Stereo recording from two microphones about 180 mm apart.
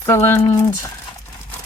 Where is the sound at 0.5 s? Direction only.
15° left (ahead or behind).